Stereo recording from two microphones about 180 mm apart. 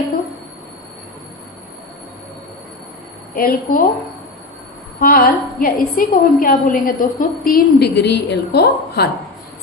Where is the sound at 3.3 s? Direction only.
55° left (ahead or behind).